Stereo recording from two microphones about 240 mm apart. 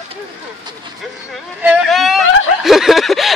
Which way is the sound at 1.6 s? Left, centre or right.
Centre.